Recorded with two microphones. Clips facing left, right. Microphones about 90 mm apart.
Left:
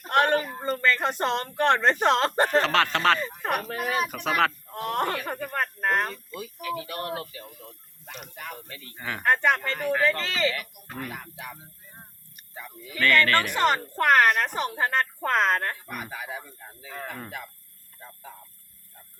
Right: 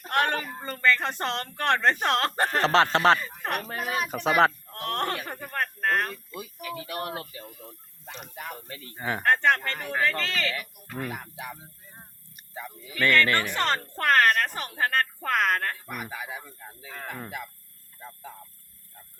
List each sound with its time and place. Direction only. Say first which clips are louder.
0.1 s a sound: left 4 dB; 20° left (ahead or behind)
0.4 s speech: left 1 dB; 15° left (ahead or behind)
2.6 s speech: right 5 dB; 30° right (ahead or behind)
3.2 s speech: left 3 dB; 15° left (ahead or behind)
4.1 s speech: right 3 dB; 30° right (ahead or behind)
4.7 s a sound: left 2 dB; 10° left (ahead or behind)
6.6 s speech: left 2 dB; centre (ahead or behind)
8.2 s speech: right 1 dB; 25° right (ahead or behind)
9.2 s speech: even; 15° left (ahead or behind)
10.9 s speech: right 2 dB; 15° right (ahead or behind)
13.0 s speech: left 1 dB; 20° right (ahead or behind)
13.5 s speech: left 4 dB; 15° left (ahead or behind)
15.9 s speech: even; 5° right (ahead or behind)